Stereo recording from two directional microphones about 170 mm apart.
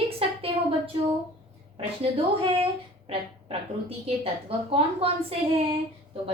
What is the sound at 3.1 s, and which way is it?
A woman's voice, 35° right (ahead or behind).